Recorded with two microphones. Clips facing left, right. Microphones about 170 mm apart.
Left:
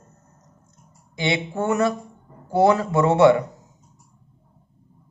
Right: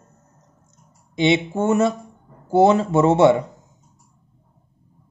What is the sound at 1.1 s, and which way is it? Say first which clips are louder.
Speech: right 6 dB; 20° right (ahead or behind).